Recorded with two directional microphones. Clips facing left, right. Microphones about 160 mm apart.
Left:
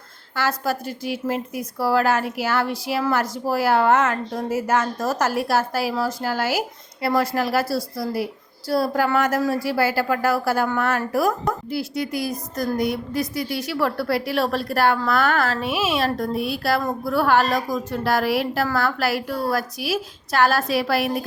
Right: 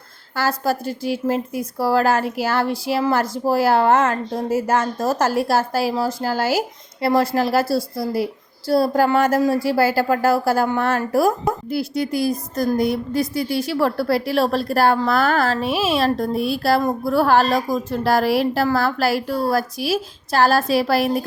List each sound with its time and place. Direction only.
0.3 s a woman's voice: 35° right (ahead or behind)